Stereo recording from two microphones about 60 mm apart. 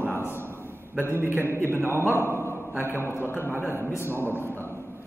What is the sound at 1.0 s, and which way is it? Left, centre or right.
A man's voice, right.